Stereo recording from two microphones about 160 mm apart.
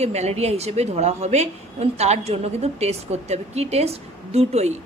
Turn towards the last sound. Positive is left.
turn(degrees=-45)  # may be behind; listen again after turning